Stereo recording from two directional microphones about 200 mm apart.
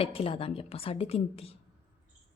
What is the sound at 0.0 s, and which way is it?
A woman's voice, 30° left (ahead or behind).